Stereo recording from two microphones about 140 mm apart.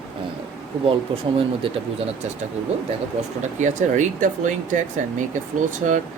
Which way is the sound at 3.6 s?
60° right (ahead or behind).